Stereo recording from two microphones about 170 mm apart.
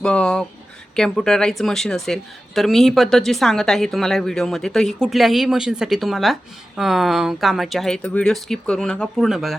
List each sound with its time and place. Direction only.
0.0 s speech: 5° left (ahead or behind)